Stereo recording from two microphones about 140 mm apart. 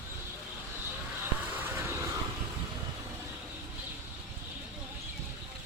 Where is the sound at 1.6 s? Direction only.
15° right (ahead or behind).